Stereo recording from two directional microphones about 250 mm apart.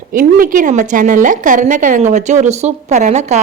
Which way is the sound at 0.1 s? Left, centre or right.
Right.